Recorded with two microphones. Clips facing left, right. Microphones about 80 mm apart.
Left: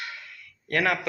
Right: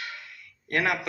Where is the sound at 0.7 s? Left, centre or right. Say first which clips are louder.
Left 1 dB; right.